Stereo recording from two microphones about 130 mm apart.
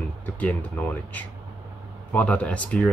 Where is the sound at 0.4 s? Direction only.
10° left (ahead or behind).